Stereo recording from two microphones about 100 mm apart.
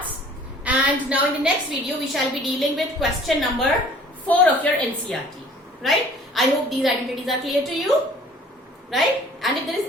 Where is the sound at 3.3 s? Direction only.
Centre (ahead or behind).